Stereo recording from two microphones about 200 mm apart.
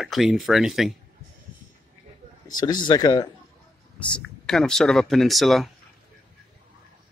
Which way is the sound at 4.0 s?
5° left (ahead or behind).